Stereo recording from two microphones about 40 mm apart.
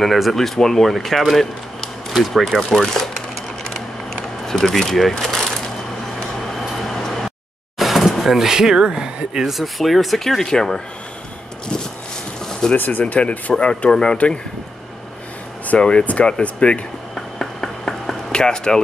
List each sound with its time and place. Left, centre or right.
0.0 s speech: centre
2.1 s speech: centre
2.5 s speech: centre
4.5 s speech: centre
5.1 s a sound: centre
6.9 s a sound: centre
7.8 s speech: centre
12.7 s speech: left
13.1 s speech: left
13.6 s speech: left
14.1 s speech: left
15.8 s speech: left
17.1 s a sound: centre